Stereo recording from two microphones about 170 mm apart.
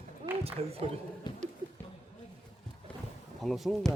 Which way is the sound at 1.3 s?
25° left (ahead or behind).